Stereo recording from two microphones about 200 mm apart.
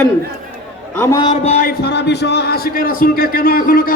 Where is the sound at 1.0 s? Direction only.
20° left (ahead or behind).